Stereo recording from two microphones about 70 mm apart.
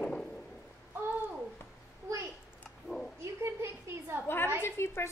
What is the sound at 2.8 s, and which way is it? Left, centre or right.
Speech, centre.